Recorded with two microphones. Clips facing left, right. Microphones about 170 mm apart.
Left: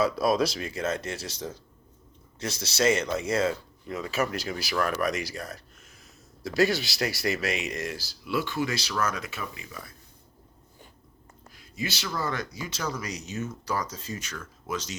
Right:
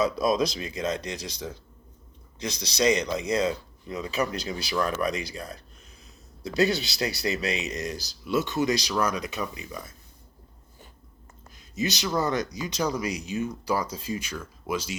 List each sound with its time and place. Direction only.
0.0 s speech: 20° right (ahead or behind)
7.0 s speech: 20° right (ahead or behind)
11.5 s speech: 20° right (ahead or behind)